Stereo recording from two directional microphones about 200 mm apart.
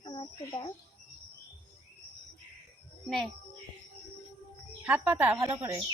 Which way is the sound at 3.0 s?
Centre (ahead or behind).